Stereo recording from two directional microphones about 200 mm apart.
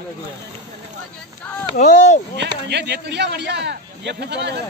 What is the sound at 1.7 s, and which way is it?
Speech, 35° left (ahead or behind).